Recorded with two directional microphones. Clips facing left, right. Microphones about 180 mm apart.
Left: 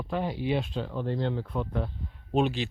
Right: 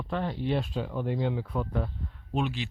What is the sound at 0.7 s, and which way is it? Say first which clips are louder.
Speech: even; 10° right (ahead or behind).